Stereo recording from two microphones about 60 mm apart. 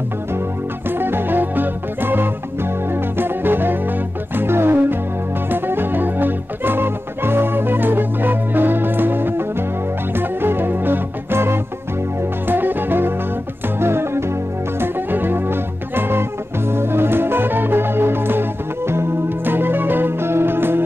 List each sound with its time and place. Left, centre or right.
0.8 s music: right
10.1 s organ: right
12.2 s music: right